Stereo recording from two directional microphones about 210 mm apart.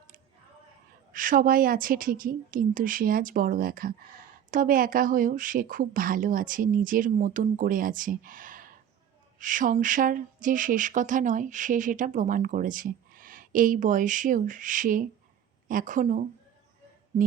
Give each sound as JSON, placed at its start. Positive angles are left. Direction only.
{"t": 1.1, "sound": "speech", "side_deg": -40}